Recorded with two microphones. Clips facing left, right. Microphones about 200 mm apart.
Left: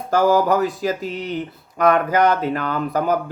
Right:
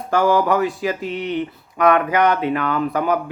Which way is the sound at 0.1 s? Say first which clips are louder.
Left 1 dB; 40° left (ahead or behind).